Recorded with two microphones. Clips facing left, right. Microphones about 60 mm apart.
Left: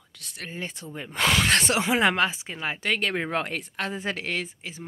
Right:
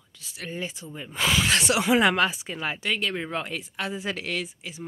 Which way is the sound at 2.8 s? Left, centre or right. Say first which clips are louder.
Left 4 dB; left.